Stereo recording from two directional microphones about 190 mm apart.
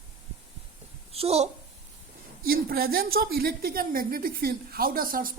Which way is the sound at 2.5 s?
50° right (ahead or behind).